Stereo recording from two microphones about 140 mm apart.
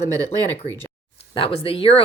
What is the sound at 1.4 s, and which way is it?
Speech, 40° left (ahead or behind).